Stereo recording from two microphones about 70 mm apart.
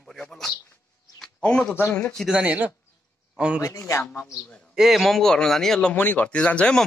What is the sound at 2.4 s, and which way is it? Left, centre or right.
Speech, right.